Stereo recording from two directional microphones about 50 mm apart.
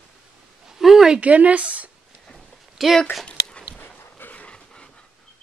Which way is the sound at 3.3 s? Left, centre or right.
Centre.